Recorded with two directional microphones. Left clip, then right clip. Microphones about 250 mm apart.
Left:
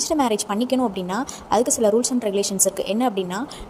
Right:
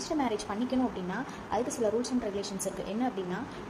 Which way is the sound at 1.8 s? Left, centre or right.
Left.